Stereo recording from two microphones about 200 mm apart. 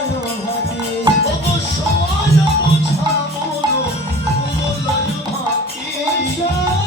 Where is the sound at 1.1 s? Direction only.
20° right (ahead or behind).